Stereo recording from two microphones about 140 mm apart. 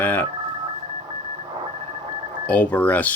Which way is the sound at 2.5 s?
10° left (ahead or behind).